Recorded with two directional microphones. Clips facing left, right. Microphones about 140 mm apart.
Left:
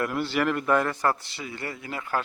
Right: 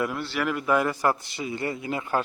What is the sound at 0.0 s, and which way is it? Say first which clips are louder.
A man's voice: left 2 dB; centre (ahead or behind).